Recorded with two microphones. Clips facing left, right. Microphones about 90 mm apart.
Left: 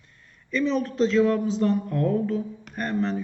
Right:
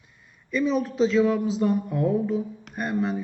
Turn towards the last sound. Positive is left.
turn(degrees=-5)  # may be behind; listen again after turning